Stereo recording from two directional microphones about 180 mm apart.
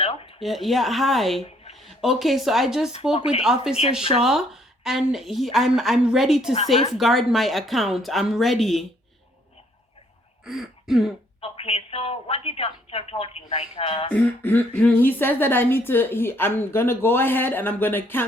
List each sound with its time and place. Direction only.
0.0 s a sound: 35° left (ahead or behind)
0.3 s a woman's voice: centre (ahead or behind)
2.9 s a woman's voice: 30° left (ahead or behind)
3.4 s a woman's voice: 5° right (ahead or behind)
10.4 s speech: centre (ahead or behind)
11.3 s a woman's voice: 30° left (ahead or behind)
14.1 s speech: 10° left (ahead or behind)